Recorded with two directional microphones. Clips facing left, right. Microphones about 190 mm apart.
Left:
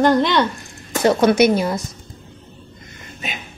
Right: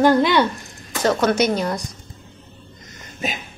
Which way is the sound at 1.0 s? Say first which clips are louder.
Left 4 dB; 15° left (ahead or behind).